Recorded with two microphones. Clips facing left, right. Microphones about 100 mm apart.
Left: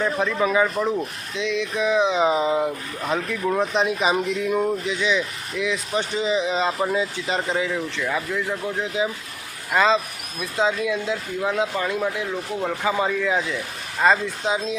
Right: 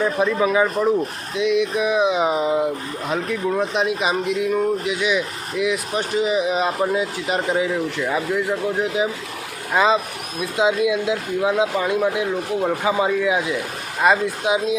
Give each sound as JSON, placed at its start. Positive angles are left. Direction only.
{"t": 0.0, "sound": "speech", "side_deg": -10}